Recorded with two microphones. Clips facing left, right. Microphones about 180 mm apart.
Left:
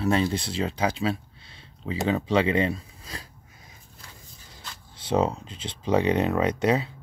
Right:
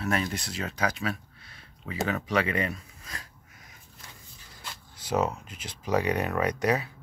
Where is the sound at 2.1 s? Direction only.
25° left (ahead or behind).